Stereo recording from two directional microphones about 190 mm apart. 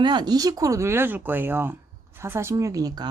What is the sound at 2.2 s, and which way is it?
Speech, 15° right (ahead or behind).